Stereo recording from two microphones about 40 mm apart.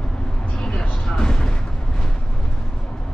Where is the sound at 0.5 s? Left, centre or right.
Left.